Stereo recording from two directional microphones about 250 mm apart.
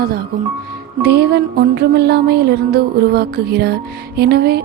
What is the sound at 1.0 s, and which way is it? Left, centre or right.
Music, right.